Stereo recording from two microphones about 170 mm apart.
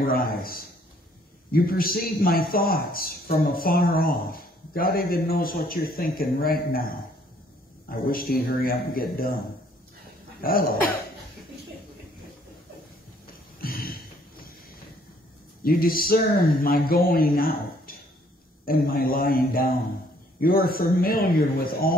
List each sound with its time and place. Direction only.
0.0 s speech: 60° left (ahead or behind)
8.1 s speech: 60° left (ahead or behind)
10.4 s speech: 60° left (ahead or behind)
13.6 s a sound: 60° left (ahead or behind)
15.6 s speech: 60° left (ahead or behind)